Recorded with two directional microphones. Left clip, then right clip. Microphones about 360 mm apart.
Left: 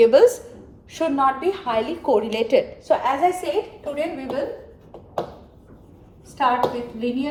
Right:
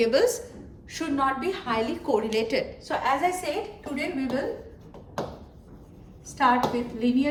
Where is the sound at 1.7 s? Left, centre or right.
Centre.